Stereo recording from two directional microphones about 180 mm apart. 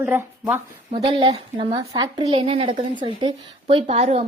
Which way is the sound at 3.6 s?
35° right (ahead or behind).